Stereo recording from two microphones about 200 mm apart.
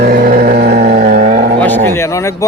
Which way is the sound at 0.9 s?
35° right (ahead or behind).